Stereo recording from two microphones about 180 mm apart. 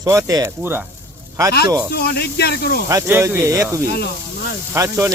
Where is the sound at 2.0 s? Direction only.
65° left (ahead or behind).